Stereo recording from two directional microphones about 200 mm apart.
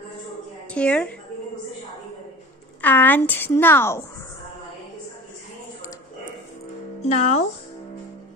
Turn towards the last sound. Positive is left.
turn(degrees=35)  # may be behind; listen again after turning